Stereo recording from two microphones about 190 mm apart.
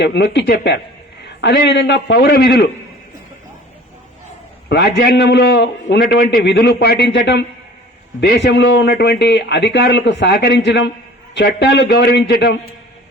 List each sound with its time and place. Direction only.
0.0 s a man's voice: 65° left (ahead or behind)
4.7 s a man's voice: 65° left (ahead or behind)